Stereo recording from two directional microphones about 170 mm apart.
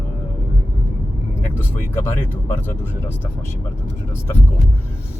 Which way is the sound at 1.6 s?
10° left (ahead or behind).